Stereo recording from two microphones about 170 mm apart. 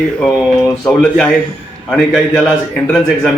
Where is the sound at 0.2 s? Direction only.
Centre (ahead or behind).